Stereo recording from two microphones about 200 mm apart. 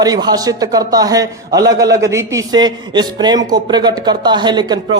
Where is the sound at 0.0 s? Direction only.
20° right (ahead or behind).